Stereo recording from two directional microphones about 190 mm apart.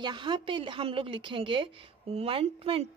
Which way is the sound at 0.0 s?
25° right (ahead or behind).